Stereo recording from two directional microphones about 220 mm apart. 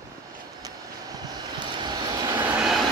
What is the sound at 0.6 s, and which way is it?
Vehicle, 15° right (ahead or behind).